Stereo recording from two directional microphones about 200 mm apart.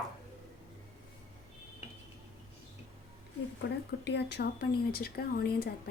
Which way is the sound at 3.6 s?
60° left (ahead or behind).